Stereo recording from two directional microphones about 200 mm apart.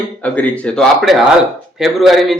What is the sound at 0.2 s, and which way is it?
A man's voice, 5° left (ahead or behind).